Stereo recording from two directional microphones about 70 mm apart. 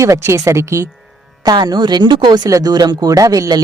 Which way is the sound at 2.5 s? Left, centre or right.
Right.